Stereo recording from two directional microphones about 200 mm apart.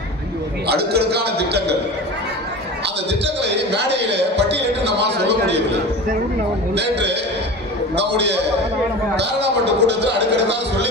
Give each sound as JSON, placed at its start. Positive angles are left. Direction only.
{"t": 0.7, "sound": "a man's voice", "side_deg": -55}
{"t": 2.8, "sound": "a man's voice", "side_deg": -60}
{"t": 6.7, "sound": "a man's voice", "side_deg": -60}